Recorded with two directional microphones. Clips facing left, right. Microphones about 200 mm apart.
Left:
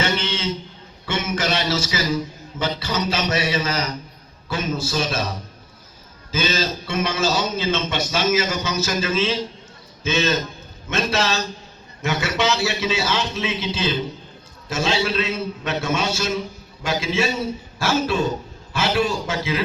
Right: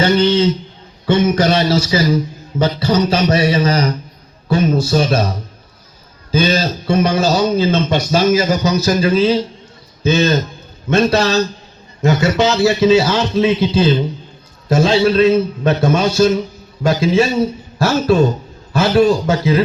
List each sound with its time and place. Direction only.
0.0 s a man's voice: 35° right (ahead or behind)
6.3 s a man's voice: 40° right (ahead or behind)